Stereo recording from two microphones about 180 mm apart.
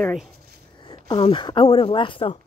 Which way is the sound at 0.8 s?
25° left (ahead or behind).